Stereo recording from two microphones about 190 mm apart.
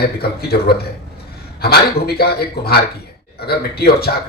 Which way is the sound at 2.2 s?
55° left (ahead or behind).